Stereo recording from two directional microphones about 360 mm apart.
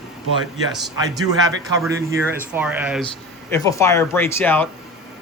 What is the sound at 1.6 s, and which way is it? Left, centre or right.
Speech, centre.